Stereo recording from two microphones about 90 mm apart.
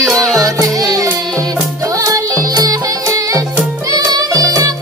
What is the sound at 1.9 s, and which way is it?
Music, 40° right (ahead or behind).